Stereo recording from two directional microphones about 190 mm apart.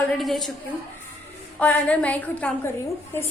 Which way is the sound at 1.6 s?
5° left (ahead or behind).